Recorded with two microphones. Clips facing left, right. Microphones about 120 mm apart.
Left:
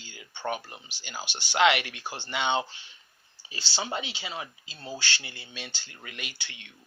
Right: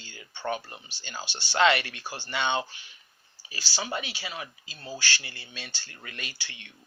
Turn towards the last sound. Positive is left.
turn(degrees=20)  # may be behind; listen again after turning